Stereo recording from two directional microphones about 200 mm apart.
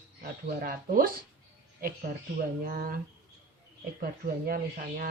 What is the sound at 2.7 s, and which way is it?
Speech, 45° right (ahead or behind).